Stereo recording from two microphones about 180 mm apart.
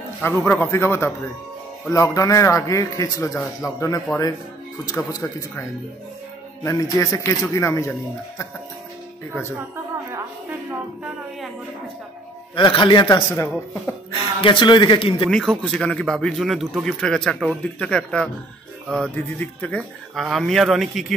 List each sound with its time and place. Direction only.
0.2 s a man's voice: 10° left (ahead or behind)
6.6 s a man's voice: 20° left (ahead or behind)
12.5 s speech: 25° left (ahead or behind)
14.4 s speech: 25° left (ahead or behind)
15.2 s a man's voice: centre (ahead or behind)